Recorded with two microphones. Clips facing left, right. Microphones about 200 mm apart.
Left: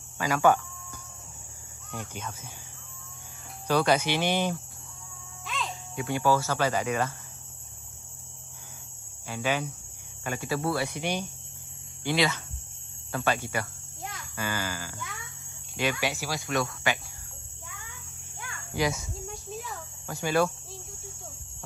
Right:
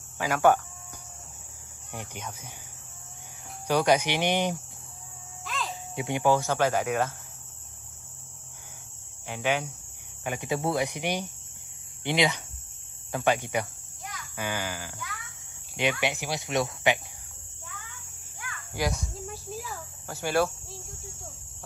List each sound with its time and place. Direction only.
0.2 s speech: 10° right (ahead or behind)
1.9 s speech: 15° right (ahead or behind)
3.6 s speech: 15° right (ahead or behind)
5.4 s music: centre (ahead or behind)
5.9 s speech: 20° right (ahead or behind)
9.3 s speech: 10° right (ahead or behind)
15.0 s music: 20° left (ahead or behind)
15.8 s speech: 20° right (ahead or behind)
18.9 s cricket: centre (ahead or behind)